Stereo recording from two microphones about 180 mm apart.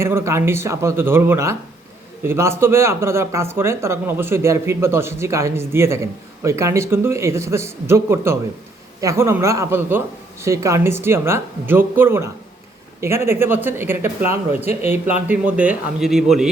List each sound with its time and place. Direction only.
0.0 s speech: 15° right (ahead or behind)
14.3 s speech: 35° left (ahead or behind)
14.8 s speech: 10° right (ahead or behind)